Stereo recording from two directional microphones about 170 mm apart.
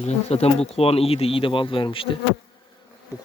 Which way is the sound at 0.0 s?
40° left (ahead or behind).